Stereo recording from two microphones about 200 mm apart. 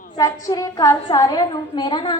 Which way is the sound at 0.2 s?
20° left (ahead or behind).